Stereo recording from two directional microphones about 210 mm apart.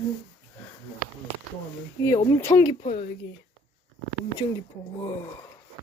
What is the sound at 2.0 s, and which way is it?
Speech, 15° left (ahead or behind).